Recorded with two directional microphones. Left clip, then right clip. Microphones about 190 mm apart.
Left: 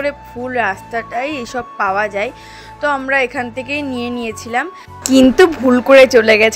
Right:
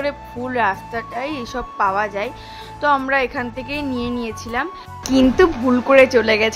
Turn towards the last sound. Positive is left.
turn(degrees=20)  # may be behind; listen again after turning